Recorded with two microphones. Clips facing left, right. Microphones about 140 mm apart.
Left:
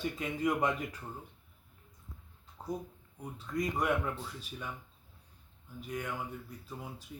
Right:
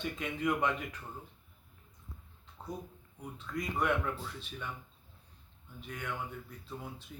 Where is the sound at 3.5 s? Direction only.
30° left (ahead or behind).